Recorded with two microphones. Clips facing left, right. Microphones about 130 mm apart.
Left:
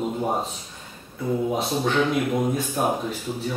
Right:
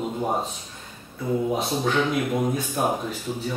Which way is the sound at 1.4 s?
Centre (ahead or behind).